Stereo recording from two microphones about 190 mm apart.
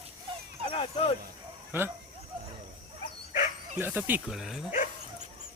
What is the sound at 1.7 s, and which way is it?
Speech, 10° right (ahead or behind).